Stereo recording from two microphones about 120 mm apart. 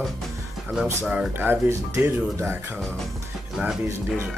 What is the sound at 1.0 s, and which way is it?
Speech, 10° right (ahead or behind).